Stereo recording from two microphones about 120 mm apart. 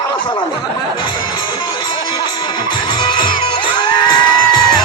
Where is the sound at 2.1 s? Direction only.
40° left (ahead or behind).